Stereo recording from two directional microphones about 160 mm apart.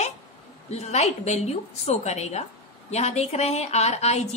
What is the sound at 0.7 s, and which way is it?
A woman's voice, 45° left (ahead or behind).